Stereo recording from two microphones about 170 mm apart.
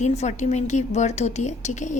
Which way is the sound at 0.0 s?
40° left (ahead or behind).